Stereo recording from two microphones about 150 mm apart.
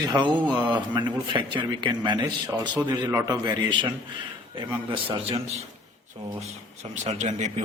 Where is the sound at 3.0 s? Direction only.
15° right (ahead or behind).